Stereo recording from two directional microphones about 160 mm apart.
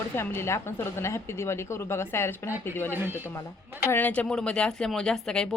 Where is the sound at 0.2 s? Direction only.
15° left (ahead or behind).